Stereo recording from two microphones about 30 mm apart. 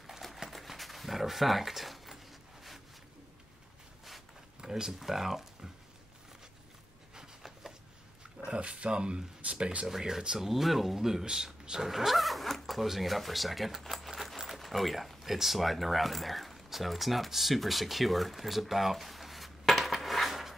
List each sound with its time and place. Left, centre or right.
0.7 s a sound: centre
4.6 s a sound: right
4.9 s speech: centre
8.5 s speech: right
9.8 s speech: centre
12.1 s vehicle: centre
12.7 s keys jangling: centre
14.6 s speech: centre